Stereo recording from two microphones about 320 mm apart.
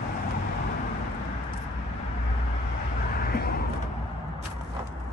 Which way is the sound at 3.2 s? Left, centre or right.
Left.